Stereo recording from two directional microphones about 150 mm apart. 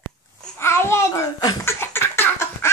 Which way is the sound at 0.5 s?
15° left (ahead or behind).